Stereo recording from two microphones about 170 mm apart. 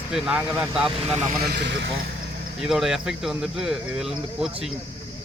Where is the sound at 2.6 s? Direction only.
Centre (ahead or behind).